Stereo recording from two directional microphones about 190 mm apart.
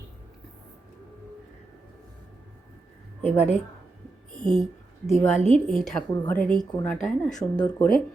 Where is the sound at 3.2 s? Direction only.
35° left (ahead or behind).